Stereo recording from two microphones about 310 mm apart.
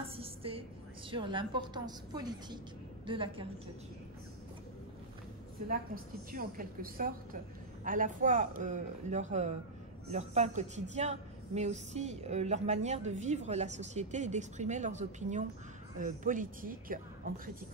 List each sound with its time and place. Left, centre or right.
0.0 s a sound: centre
1.1 s a woman's voice: centre
6.3 s a woman's voice: right